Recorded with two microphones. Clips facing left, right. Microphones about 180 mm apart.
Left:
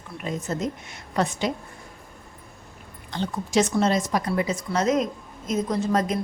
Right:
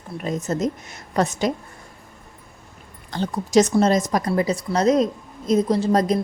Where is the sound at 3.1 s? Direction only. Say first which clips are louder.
Right 4 dB; 40° right (ahead or behind).